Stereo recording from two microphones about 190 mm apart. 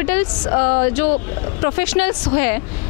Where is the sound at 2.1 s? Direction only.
20° left (ahead or behind).